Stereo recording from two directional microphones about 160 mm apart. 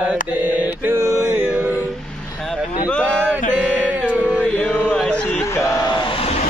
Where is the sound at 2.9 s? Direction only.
5° left (ahead or behind).